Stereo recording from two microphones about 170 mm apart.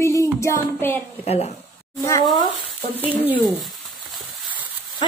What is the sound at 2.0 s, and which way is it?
Speech, 20° left (ahead or behind).